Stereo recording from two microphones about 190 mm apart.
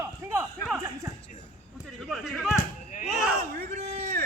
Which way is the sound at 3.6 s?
50° right (ahead or behind).